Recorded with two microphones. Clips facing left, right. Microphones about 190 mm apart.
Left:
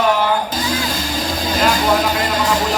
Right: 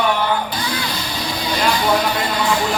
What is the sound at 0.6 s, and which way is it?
Vehicle, 45° left (ahead or behind).